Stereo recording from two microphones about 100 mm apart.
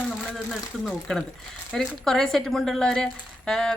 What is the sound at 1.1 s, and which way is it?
A woman's voice, 5° left (ahead or behind).